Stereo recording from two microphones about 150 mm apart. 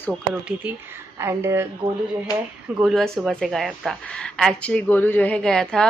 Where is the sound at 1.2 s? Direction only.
20° right (ahead or behind).